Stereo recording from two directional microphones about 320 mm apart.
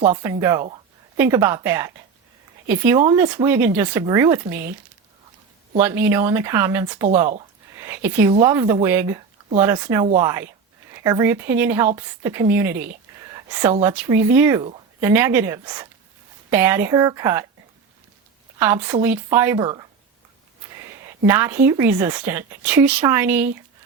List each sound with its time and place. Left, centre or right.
0.1 s a woman's voice: centre
5.8 s a woman's voice: centre
18.6 s a woman's voice: centre